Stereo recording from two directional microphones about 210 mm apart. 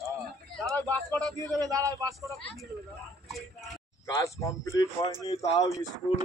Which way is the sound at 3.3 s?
Centre (ahead or behind).